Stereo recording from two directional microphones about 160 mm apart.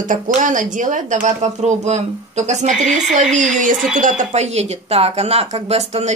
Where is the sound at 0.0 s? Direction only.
55° right (ahead or behind).